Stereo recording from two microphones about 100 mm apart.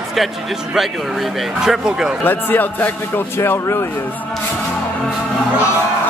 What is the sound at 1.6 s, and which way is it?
Speech, 5° right (ahead or behind).